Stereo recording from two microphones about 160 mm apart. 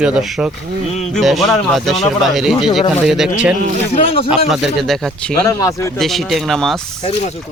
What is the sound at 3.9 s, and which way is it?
Speech, 35° left (ahead or behind).